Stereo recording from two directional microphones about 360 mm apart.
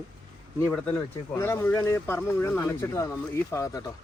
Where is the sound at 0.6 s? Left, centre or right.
Centre.